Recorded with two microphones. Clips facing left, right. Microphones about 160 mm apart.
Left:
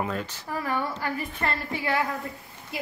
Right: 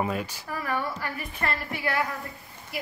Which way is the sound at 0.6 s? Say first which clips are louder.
Left 1 dB; 30° left (ahead or behind).